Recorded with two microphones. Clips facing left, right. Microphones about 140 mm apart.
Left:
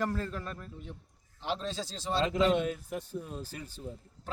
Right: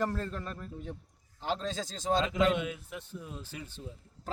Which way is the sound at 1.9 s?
45° right (ahead or behind).